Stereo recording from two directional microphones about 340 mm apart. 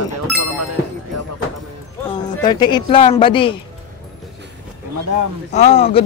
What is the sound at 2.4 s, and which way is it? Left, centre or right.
Speech, centre.